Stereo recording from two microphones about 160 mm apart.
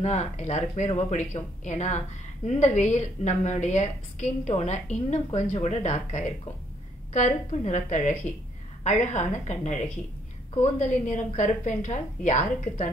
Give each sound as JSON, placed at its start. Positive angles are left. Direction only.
{"t": 0.0, "sound": "a woman's voice", "side_deg": 45}